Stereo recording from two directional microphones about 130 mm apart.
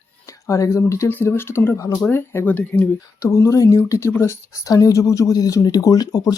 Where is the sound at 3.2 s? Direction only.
25° left (ahead or behind).